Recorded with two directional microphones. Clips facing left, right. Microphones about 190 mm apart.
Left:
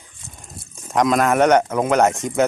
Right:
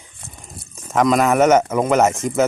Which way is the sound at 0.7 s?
Centre (ahead or behind).